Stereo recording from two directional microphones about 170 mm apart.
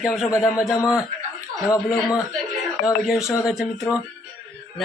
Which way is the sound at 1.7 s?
20° left (ahead or behind).